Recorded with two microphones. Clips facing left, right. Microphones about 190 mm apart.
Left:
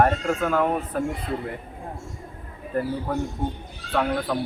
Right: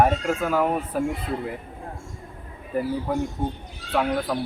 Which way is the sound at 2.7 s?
10° right (ahead or behind).